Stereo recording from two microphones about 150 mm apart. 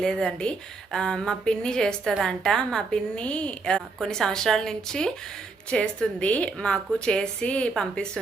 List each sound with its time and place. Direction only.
0.0 s a woman's voice: 5° left (ahead or behind)